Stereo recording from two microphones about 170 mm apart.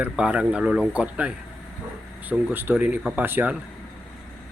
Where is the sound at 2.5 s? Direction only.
10° right (ahead or behind).